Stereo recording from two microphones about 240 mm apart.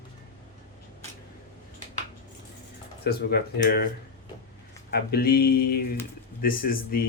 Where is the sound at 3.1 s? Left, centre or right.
Left.